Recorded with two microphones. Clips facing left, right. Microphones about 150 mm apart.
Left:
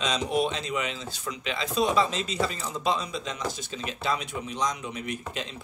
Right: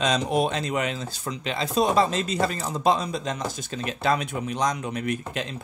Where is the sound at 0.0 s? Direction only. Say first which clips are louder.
Right 3 dB; 50° right (ahead or behind).